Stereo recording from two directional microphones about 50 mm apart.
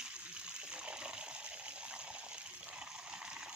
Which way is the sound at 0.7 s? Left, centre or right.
Centre.